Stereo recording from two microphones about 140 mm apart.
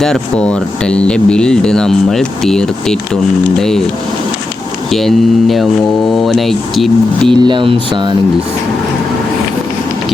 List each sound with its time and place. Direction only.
0.0 s speech: 5° left (ahead or behind)
4.9 s speech: centre (ahead or behind)
7.3 s speech: 35° right (ahead or behind)